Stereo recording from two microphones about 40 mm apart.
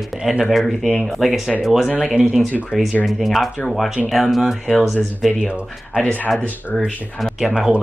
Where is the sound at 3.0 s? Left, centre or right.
Centre.